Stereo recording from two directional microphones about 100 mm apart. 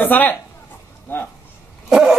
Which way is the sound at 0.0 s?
20° left (ahead or behind).